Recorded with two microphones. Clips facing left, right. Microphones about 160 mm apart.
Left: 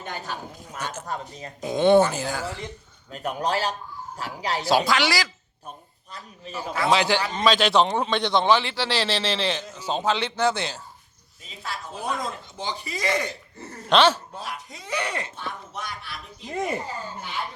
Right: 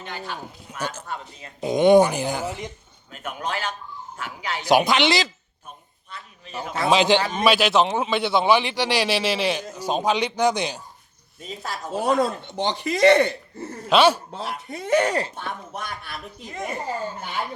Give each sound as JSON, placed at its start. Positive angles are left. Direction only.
{"t": 0.0, "sound": "a man's voice", "side_deg": 45}
{"t": 0.8, "sound": "speech", "side_deg": -35}
{"t": 1.0, "sound": "a man's voice", "side_deg": 40}
{"t": 1.6, "sound": "a man's voice", "side_deg": -15}
{"t": 3.1, "sound": "a man's voice", "side_deg": 35}
{"t": 4.6, "sound": "speech", "side_deg": -20}
{"t": 6.1, "sound": "a man's voice", "side_deg": 35}
{"t": 6.7, "sound": "a man's voice", "side_deg": -20}
{"t": 11.4, "sound": "a man's voice", "side_deg": -40}
{"t": 11.9, "sound": "chopping", "side_deg": -70}
{"t": 13.8, "sound": "speech", "side_deg": -10}
{"t": 14.7, "sound": "a man's voice", "side_deg": -55}
{"t": 15.4, "sound": "a man's voice", "side_deg": -50}